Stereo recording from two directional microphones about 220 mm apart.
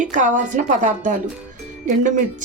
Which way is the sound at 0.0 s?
35° right (ahead or behind).